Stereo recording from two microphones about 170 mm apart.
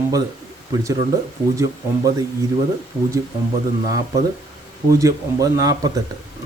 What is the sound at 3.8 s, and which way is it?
Speech, 20° right (ahead or behind).